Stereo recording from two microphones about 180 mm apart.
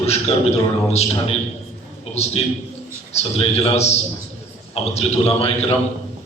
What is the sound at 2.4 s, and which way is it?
A man's voice, 30° left (ahead or behind).